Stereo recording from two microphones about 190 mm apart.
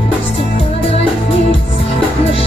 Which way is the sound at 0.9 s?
30° left (ahead or behind).